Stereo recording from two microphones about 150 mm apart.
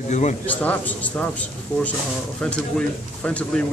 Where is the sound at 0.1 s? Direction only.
50° left (ahead or behind).